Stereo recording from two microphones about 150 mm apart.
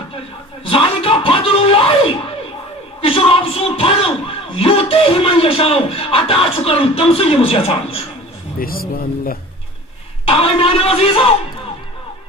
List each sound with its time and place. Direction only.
0.7 s a sound: 40° left (ahead or behind)
3.0 s speech: 40° left (ahead or behind)
8.5 s speech: 75° left (ahead or behind)
10.2 s a man's voice: 40° left (ahead or behind)